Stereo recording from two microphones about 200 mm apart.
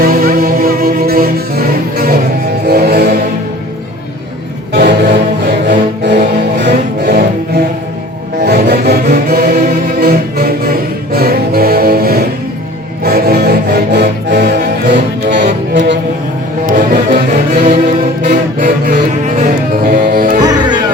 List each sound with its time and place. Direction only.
0.0 s music: 50° right (ahead or behind)
4.7 s music: 55° right (ahead or behind)
16.6 s music: 45° right (ahead or behind)
20.4 s music: 20° right (ahead or behind)